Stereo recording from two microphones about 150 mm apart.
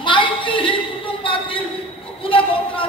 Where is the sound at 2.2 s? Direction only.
35° left (ahead or behind).